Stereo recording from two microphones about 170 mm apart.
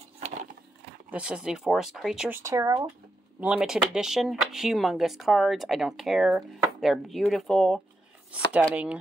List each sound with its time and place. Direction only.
0.2 s a sound: 40° right (ahead or behind)
1.1 s speech: 5° right (ahead or behind)
3.3 s speech: 5° right (ahead or behind)